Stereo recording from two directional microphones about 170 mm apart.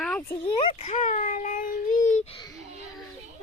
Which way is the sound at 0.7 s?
35° left (ahead or behind).